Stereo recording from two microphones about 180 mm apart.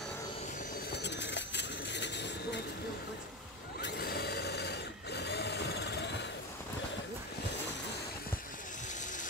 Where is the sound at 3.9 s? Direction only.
60° left (ahead or behind).